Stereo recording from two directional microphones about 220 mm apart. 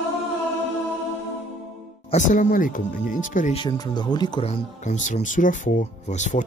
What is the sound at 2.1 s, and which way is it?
Speech, 35° left (ahead or behind).